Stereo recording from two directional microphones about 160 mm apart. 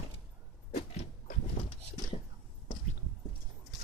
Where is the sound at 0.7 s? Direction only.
40° left (ahead or behind).